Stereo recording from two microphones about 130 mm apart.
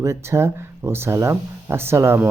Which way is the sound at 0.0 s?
20° right (ahead or behind).